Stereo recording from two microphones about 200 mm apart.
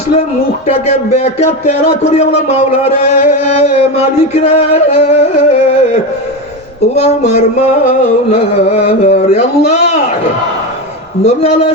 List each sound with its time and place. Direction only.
0.9 s speech: 35° left (ahead or behind)
11.2 s speech: 30° left (ahead or behind)